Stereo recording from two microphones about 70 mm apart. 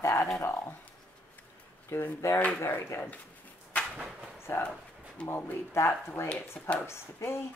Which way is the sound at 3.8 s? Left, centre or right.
Centre.